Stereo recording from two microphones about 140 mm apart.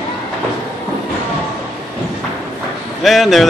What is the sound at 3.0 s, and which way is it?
Speech, centre (ahead or behind).